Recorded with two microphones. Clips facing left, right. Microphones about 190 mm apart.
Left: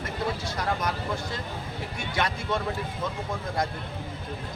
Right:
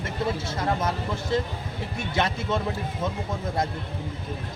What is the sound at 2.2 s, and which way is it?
Speech, 25° right (ahead or behind).